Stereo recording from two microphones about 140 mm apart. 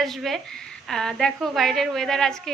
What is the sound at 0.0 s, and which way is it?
A woman's voice, centre (ahead or behind).